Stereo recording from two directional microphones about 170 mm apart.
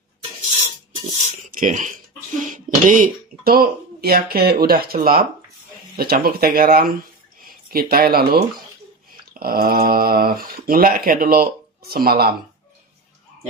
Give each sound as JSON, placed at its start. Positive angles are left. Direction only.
{"t": 1.5, "sound": "speech", "side_deg": -50}